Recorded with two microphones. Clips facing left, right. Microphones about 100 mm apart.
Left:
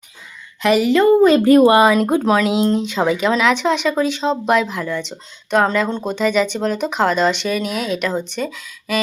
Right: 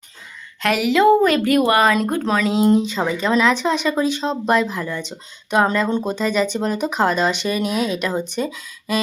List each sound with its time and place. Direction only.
0.6 s speech: centre (ahead or behind)
1.3 s speech: 35° left (ahead or behind)
1.8 s speech: 10° left (ahead or behind)
2.6 s speech: 10° right (ahead or behind)
2.9 s speech: 10° left (ahead or behind)
3.3 s speech: centre (ahead or behind)